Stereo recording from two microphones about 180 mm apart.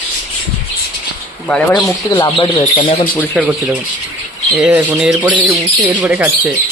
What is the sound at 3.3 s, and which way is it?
Speech, 10° right (ahead or behind).